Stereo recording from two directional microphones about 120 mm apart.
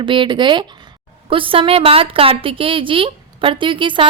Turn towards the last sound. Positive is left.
turn(degrees=-45)  # may be behind; listen again after turning